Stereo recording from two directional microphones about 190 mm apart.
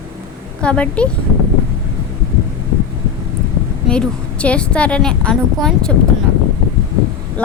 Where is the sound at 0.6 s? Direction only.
5° left (ahead or behind).